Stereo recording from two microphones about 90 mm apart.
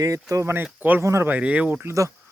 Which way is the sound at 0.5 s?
20° right (ahead or behind).